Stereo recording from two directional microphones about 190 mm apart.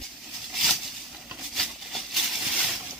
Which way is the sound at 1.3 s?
Centre (ahead or behind).